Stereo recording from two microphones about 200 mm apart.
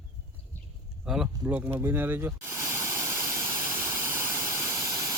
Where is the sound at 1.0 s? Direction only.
5° right (ahead or behind).